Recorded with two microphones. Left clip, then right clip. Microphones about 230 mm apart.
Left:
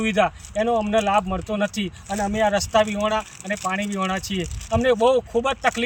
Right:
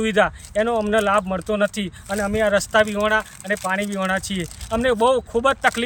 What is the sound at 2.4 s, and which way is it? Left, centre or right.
Speech, centre.